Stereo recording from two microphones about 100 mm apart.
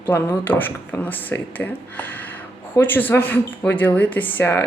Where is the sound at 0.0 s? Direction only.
20° left (ahead or behind).